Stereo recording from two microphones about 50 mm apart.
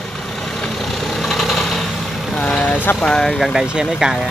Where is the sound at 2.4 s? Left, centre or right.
Left.